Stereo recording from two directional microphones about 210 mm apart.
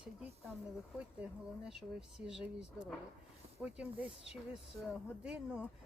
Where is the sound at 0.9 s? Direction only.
5° right (ahead or behind).